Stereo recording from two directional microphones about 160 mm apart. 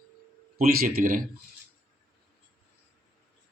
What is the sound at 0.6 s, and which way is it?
Speech, 65° right (ahead or behind).